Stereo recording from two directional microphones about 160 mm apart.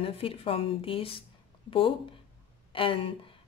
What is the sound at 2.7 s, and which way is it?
Speech, 35° left (ahead or behind).